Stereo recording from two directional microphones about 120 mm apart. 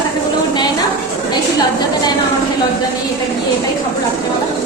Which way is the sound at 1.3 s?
35° left (ahead or behind).